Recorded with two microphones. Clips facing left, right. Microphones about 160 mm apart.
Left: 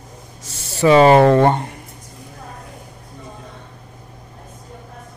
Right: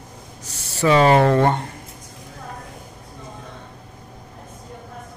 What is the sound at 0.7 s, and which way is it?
Speech, 15° left (ahead or behind).